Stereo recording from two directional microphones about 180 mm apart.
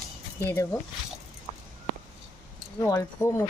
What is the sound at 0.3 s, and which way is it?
Speech, 15° left (ahead or behind).